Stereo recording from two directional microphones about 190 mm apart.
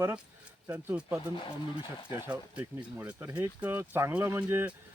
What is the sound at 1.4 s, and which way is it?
Speech, 25° left (ahead or behind).